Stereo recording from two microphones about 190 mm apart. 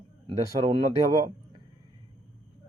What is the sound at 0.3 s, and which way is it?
Speech, 25° right (ahead or behind).